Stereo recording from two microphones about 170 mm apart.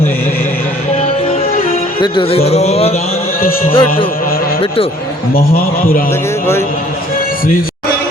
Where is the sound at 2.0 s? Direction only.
30° left (ahead or behind).